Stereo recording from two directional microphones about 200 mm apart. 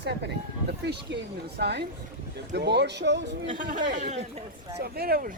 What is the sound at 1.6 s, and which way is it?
Speech, 55° right (ahead or behind).